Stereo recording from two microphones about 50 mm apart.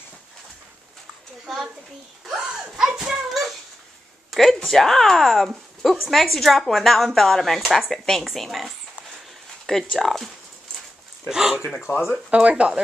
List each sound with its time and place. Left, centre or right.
2.3 s a sound: centre
3.3 s cat: centre
4.3 s a woman's voice: centre
11.2 s a man's voice: centre
11.9 s speech: left
12.3 s speech: right